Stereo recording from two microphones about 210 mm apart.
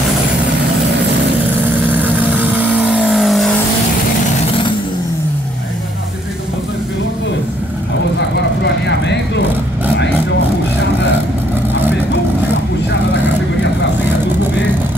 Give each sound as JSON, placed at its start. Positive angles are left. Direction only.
{"t": 2.4, "sound": "vehicle", "side_deg": -5}
{"t": 8.2, "sound": "vehicle", "side_deg": 55}